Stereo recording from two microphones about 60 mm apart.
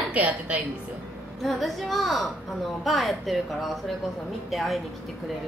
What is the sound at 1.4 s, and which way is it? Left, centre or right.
Speech, centre.